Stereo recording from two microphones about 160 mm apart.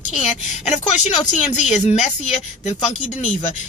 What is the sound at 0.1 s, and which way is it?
Speech, 45° left (ahead or behind).